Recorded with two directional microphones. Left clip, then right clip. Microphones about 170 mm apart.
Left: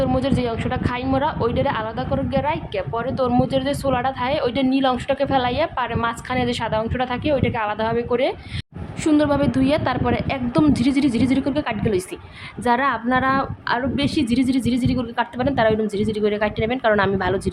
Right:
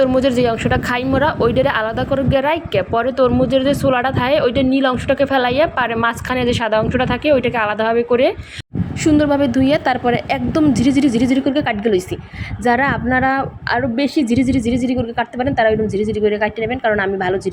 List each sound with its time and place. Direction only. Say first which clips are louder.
0.0 s a woman's voice: right 7 dB; 25° right (ahead or behind)